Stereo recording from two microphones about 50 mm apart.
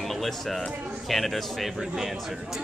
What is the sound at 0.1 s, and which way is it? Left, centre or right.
A woman's voice, centre.